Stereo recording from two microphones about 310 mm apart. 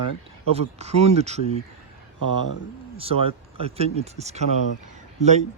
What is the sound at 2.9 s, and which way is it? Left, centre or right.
Speech, centre.